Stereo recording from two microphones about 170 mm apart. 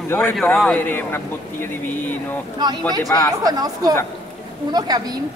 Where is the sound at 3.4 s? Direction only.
20° right (ahead or behind).